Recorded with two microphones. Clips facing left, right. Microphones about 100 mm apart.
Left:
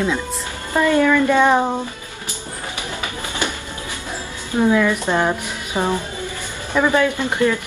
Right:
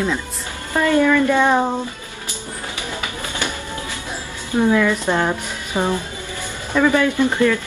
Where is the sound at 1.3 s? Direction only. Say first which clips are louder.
Left 1 dB; 15° left (ahead or behind).